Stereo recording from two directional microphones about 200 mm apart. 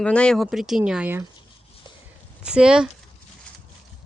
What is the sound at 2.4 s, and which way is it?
Speech, 5° right (ahead or behind).